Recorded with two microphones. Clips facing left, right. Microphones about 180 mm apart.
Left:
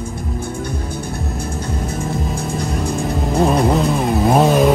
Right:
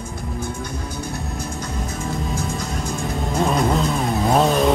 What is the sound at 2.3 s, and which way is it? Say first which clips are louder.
Music: left 4 dB; 60° left (ahead or behind).